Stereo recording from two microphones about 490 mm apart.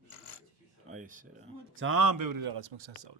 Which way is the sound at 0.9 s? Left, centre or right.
Centre.